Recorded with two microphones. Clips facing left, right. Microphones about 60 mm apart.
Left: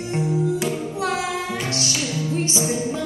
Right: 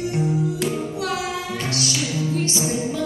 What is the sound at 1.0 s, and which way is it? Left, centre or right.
Child singing, left.